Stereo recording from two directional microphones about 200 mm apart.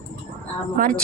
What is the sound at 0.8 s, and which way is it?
Speech, 45° right (ahead or behind).